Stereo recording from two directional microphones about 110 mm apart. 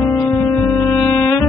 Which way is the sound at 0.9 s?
20° left (ahead or behind).